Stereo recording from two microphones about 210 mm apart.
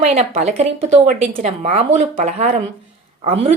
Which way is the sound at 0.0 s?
30° right (ahead or behind).